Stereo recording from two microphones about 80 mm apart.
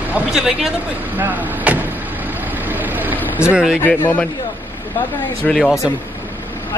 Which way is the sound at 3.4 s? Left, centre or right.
Left.